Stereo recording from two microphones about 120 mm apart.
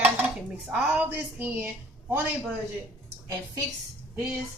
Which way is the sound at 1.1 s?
15° right (ahead or behind).